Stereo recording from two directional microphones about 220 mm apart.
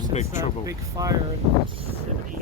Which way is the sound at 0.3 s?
15° right (ahead or behind).